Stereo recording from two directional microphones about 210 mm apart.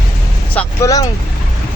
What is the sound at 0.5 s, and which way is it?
Speech, 15° left (ahead or behind).